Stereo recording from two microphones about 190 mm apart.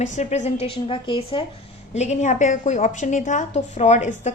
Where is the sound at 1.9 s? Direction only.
40° left (ahead or behind).